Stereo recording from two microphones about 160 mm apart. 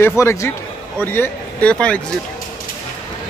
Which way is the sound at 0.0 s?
15° left (ahead or behind).